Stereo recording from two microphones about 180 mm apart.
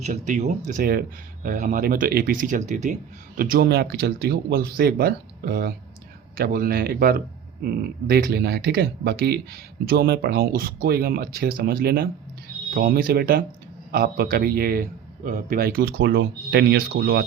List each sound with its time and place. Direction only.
0.0 s speech: 40° right (ahead or behind)
3.3 s speech: 50° right (ahead or behind)